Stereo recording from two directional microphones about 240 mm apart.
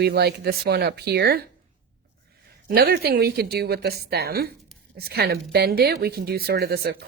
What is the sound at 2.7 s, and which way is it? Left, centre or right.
Speech, right.